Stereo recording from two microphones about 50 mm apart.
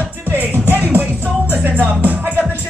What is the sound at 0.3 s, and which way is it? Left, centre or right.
Music, right.